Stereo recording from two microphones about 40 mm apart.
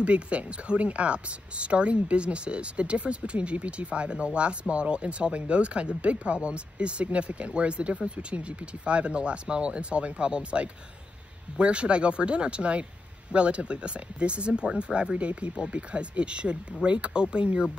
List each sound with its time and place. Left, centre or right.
0.0 s speech: right